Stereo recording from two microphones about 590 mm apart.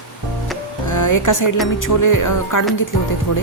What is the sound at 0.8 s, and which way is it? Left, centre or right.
Speech, left.